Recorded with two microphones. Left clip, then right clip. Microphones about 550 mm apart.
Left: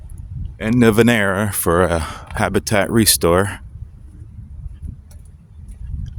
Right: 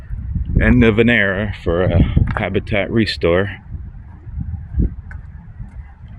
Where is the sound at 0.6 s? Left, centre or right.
Left.